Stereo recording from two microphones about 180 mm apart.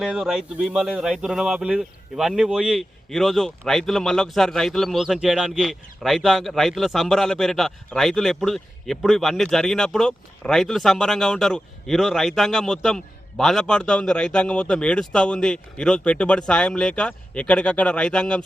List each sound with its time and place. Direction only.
0.0 s speech: 5° right (ahead or behind)